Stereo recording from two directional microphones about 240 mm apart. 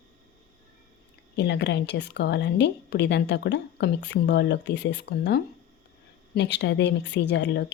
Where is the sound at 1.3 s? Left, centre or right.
Left.